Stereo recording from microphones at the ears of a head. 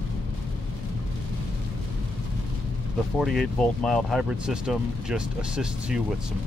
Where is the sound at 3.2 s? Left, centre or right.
Centre.